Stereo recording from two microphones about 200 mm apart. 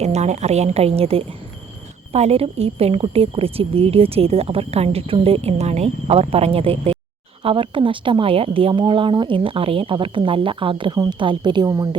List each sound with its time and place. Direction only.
0.0 s a woman's voice: 35° right (ahead or behind); by 11.9 s 20° right (ahead or behind)